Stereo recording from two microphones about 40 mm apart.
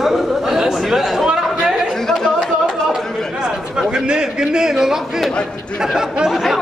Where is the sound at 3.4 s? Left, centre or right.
Right.